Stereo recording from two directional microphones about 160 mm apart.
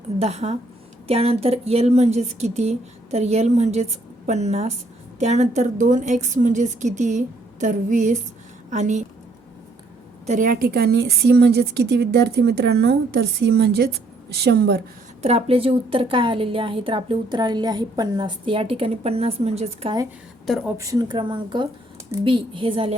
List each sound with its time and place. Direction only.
0.2 s speech: 40° right (ahead or behind)
10.2 s a woman's voice: 55° right (ahead or behind); by 14.8 s 90° right
15.2 s a woman's voice: 40° right (ahead or behind)
20.5 s speech: centre (ahead or behind)
20.7 s a woman's voice: 20° right (ahead or behind)